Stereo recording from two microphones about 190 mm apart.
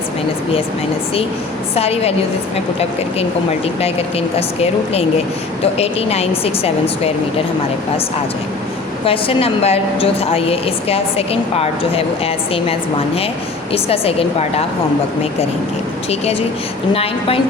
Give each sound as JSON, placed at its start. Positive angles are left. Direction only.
{"t": 1.7, "sound": "a woman's voice", "side_deg": 30}
{"t": 3.8, "sound": "a woman's voice", "side_deg": 30}
{"t": 9.0, "sound": "a woman's voice", "side_deg": 30}
{"t": 13.7, "sound": "a woman's voice", "side_deg": 30}
{"t": 16.9, "sound": "a woman's voice", "side_deg": 30}